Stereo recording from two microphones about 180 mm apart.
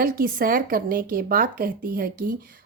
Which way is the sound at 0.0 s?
55° right (ahead or behind).